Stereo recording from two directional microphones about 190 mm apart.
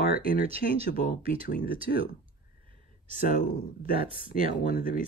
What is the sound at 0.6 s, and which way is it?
Speech, 65° left (ahead or behind).